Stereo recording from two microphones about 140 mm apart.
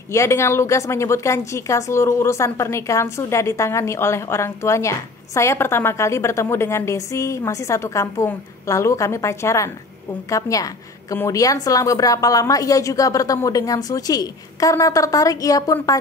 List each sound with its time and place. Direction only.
0.1 s a woman's voice: 20° left (ahead or behind)